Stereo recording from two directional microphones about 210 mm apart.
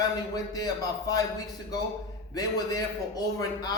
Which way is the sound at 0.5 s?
15° left (ahead or behind).